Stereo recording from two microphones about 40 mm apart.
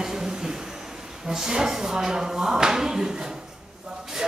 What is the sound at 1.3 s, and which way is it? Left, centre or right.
Speech, centre.